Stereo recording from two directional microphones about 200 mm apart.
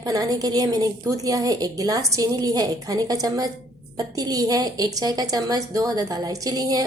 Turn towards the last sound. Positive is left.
turn(degrees=-20)  # may be behind; listen again after turning